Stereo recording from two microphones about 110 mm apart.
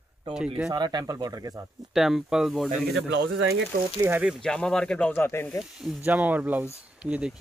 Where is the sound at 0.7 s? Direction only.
40° right (ahead or behind).